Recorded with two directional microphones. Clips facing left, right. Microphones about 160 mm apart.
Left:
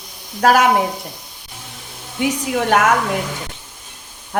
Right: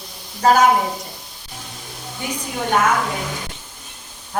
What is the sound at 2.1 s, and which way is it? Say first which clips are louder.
Speech: left 8 dB; 80° left.